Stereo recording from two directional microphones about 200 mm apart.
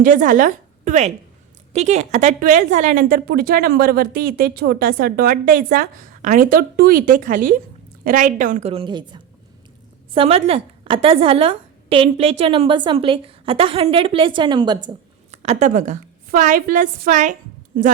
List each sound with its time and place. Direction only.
0.0 s a woman's voice: 40° right (ahead or behind)